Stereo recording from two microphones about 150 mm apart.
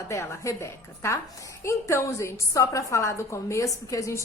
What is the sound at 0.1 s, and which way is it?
A woman's voice, 20° left (ahead or behind).